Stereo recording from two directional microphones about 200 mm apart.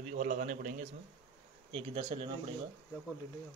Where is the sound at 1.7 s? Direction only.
30° right (ahead or behind).